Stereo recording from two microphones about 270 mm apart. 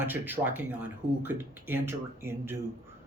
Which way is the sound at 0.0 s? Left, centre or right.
Centre.